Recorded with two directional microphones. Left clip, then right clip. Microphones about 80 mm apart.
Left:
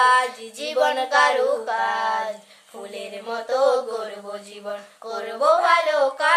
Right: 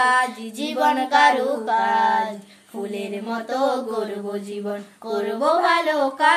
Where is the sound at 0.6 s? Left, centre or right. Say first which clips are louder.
Right 1 dB; centre.